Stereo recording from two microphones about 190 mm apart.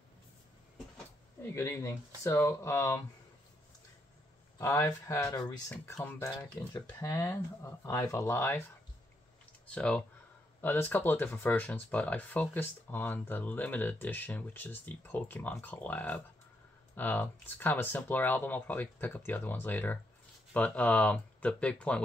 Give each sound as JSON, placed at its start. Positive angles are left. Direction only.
{"t": 0.9, "sound": "speech", "side_deg": 15}
{"t": 4.6, "sound": "speech", "side_deg": 15}
{"t": 9.7, "sound": "speech", "side_deg": 5}